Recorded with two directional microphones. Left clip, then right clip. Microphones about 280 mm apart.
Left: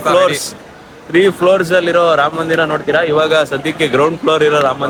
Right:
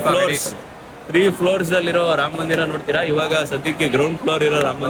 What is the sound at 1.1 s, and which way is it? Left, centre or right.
Speech, centre.